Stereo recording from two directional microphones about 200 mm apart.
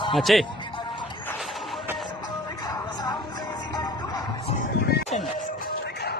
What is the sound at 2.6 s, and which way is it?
Music, 20° left (ahead or behind).